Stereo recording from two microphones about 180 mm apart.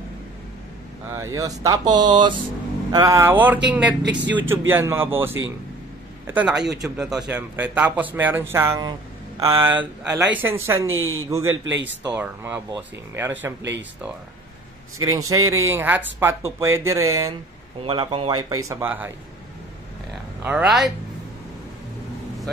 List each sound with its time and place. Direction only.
1.1 s a man's voice: 15° right (ahead or behind)
4.0 s speech: 75° right (ahead or behind)
4.3 s a man's voice: 10° right (ahead or behind)
9.4 s speech: 25° right (ahead or behind)
10.1 s a man's voice: 10° right (ahead or behind)
10.9 s speech: 90° right
11.2 s a man's voice: 15° right (ahead or behind)
11.5 s speech: 90° right
12.1 s a man's voice: 10° right (ahead or behind)
13.6 s speech: 80° right
15.0 s a man's voice: 20° right (ahead or behind)
17.8 s speech: 30° right (ahead or behind); by 19.1 s 10° right (ahead or behind)
20.4 s speech: 5° right (ahead or behind)